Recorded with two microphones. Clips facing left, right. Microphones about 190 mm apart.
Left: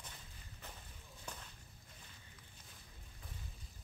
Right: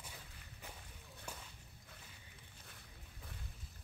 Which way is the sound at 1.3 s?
10° right (ahead or behind).